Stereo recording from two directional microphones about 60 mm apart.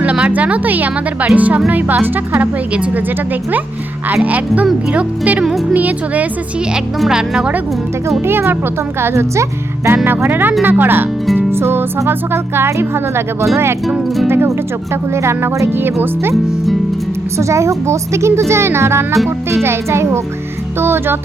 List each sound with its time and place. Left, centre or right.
0.0 s speech: right
2.7 s speech: right
4.1 s speech: right
5.4 s speech: centre
5.7 s speech: right
7.1 s speech: centre
8.2 s speech: right
10.2 s speech: right
11.3 s music: right
12.0 s speech: right
17.3 s speech: right